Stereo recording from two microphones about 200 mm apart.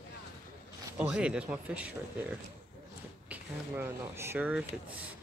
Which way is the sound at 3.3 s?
10° right (ahead or behind).